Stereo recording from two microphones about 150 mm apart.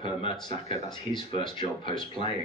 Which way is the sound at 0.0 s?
35° left (ahead or behind).